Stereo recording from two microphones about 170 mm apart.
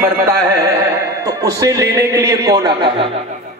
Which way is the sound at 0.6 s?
15° right (ahead or behind).